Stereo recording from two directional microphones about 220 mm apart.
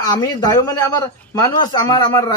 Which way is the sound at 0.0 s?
15° left (ahead or behind).